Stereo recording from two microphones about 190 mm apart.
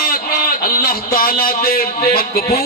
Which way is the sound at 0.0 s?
50° left (ahead or behind).